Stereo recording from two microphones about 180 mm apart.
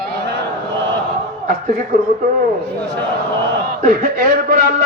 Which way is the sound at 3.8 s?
50° right (ahead or behind).